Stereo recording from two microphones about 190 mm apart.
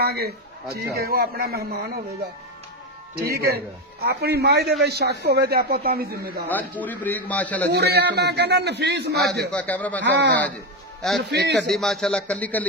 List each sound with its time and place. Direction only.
0.0 s a man's voice: 55° right (ahead or behind)
3.2 s a man's voice: 55° right (ahead or behind)
6.5 s a man's voice: 10° left (ahead or behind)
7.7 s a man's voice: 60° right (ahead or behind)
9.5 s a man's voice: 10° left (ahead or behind)
10.0 s a man's voice: 70° right (ahead or behind)
11.0 s a man's voice: centre (ahead or behind)
11.2 s a man's voice: 65° right (ahead or behind)
11.7 s a man's voice: centre (ahead or behind)